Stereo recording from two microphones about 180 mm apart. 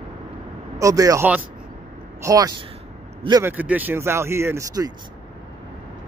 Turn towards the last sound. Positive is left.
turn(degrees=-20)  # may be behind; listen again after turning